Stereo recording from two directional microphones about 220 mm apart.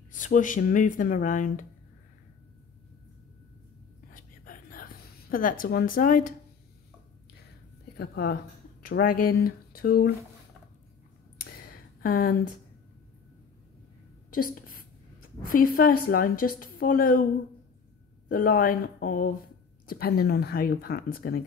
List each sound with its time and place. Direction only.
0.1 s a woman's voice: 35° left (ahead or behind)
4.1 s whispering: 40° left (ahead or behind)
5.3 s a woman's voice: 40° left (ahead or behind)
8.0 s speech: 45° left (ahead or behind)
11.5 s a sound: 45° left (ahead or behind)
14.3 s a sound: 40° left (ahead or behind)
15.4 s a woman's voice: 40° left (ahead or behind)
18.3 s a woman's voice: 40° left (ahead or behind)